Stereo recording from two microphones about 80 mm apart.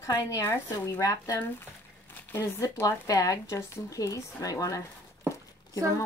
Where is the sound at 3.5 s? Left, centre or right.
Left.